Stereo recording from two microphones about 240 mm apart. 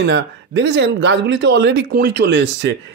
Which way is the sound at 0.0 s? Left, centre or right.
Right.